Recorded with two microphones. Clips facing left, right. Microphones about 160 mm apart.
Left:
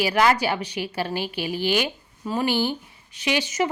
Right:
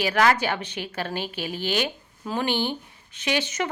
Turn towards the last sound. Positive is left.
turn(degrees=10)  # may be behind; listen again after turning